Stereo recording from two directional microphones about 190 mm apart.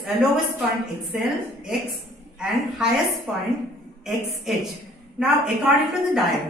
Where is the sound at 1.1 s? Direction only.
Centre (ahead or behind).